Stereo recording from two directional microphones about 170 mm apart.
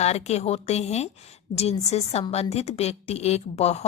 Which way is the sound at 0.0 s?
40° left (ahead or behind).